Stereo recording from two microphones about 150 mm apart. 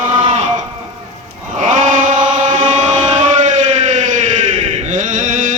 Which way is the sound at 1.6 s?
55° right (ahead or behind).